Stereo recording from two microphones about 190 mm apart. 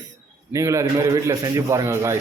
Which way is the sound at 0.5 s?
15° right (ahead or behind).